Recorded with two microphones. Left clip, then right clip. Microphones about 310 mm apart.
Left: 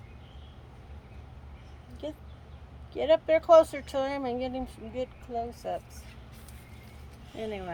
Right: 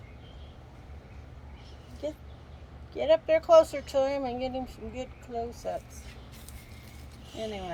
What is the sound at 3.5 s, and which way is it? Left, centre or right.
Speech, centre.